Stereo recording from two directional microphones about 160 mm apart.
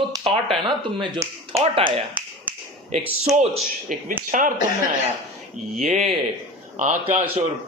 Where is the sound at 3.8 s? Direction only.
55° right (ahead or behind).